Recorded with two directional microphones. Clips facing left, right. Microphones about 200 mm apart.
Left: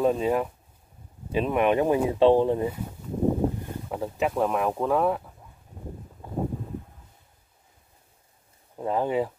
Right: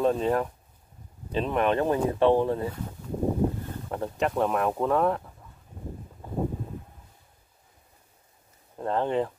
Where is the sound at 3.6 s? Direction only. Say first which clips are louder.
Left 1 dB; 5° left (ahead or behind).